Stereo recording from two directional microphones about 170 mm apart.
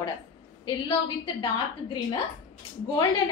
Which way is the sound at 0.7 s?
30° left (ahead or behind).